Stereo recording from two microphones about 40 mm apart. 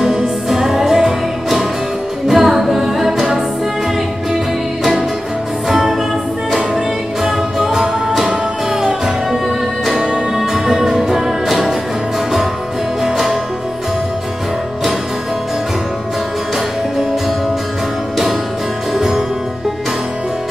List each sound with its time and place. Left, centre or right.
0.0 s music: centre
2.2 s a capella: centre
5.7 s music: centre
7.2 s music: centre
18.9 s music: centre